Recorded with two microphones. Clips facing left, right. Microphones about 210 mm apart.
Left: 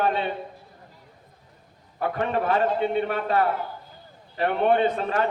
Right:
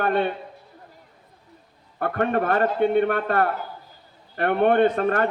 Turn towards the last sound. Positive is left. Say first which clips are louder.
# right 4 dB
turn(degrees=-60)  # may be behind; listen again after turning